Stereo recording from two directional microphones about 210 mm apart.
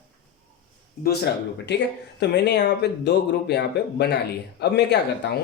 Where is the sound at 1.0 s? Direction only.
50° left (ahead or behind).